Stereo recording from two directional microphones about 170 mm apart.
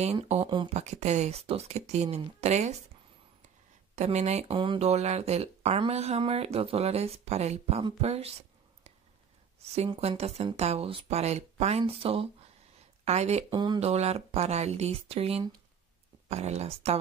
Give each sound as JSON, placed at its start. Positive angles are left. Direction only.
{"t": 0.0, "sound": "speech", "side_deg": -40}
{"t": 3.9, "sound": "speech", "side_deg": -40}
{"t": 13.5, "sound": "speech", "side_deg": -25}
{"t": 13.7, "sound": "speech", "side_deg": -40}